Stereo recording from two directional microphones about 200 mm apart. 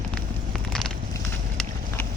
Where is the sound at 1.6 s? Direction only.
10° left (ahead or behind).